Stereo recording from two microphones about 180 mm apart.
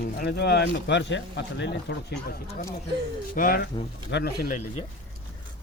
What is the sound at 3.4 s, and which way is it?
Speech, 55° left (ahead or behind).